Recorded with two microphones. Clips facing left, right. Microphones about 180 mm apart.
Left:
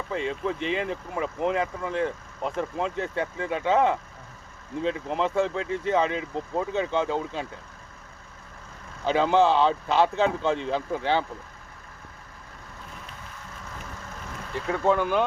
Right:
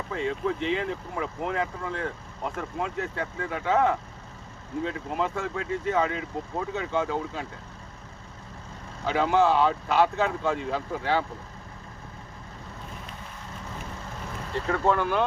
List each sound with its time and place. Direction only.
0.1 s speech: 20° left (ahead or behind)
9.0 s speech: 25° left (ahead or behind)
14.7 s speech: 15° left (ahead or behind)